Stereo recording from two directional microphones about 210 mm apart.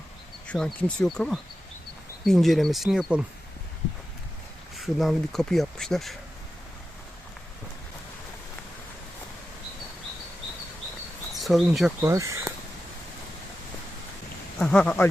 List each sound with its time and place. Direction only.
0.4 s speech: 5° left (ahead or behind)
4.8 s speech: centre (ahead or behind)
11.3 s speech: centre (ahead or behind)
12.0 s speech: 15° right (ahead or behind)
14.6 s speech: 5° left (ahead or behind)